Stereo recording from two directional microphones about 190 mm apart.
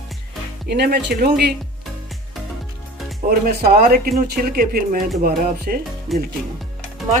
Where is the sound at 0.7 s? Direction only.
60° right (ahead or behind).